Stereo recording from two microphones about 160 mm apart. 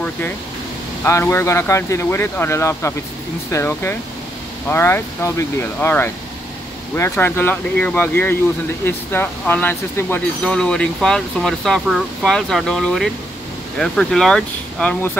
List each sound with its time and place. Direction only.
1.0 s speech: 15° left (ahead or behind)